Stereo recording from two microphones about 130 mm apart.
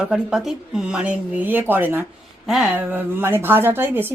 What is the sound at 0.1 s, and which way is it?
A woman's voice, 5° right (ahead or behind).